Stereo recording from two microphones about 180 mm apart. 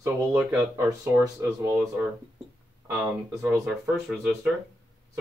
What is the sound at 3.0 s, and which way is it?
Speech, 10° right (ahead or behind).